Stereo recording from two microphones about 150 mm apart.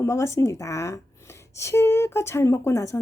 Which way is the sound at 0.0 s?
20° left (ahead or behind).